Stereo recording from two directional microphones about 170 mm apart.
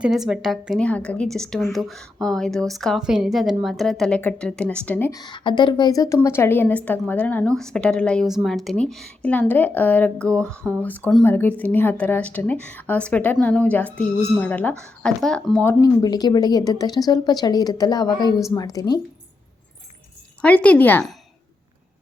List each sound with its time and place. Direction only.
0.0 s a woman's voice: 5° right (ahead or behind)
5.2 s a woman's voice: 25° left (ahead or behind); by 15.7 s 5° left (ahead or behind)
15.8 s speech: 25° left (ahead or behind)
20.4 s speech: 10° left (ahead or behind)